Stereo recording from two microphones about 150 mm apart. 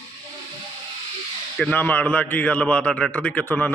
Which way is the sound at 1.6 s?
10° left (ahead or behind).